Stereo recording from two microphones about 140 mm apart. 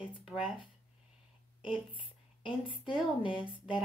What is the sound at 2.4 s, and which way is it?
Speech, 35° left (ahead or behind).